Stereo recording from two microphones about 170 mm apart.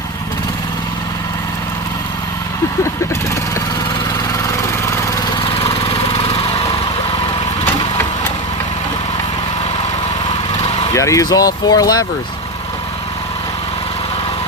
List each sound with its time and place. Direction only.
5.5 s lawn mower: 35° left (ahead or behind)
10.9 s speech: 20° left (ahead or behind)